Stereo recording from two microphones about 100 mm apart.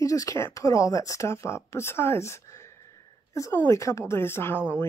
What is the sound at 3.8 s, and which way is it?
Speech, 30° left (ahead or behind).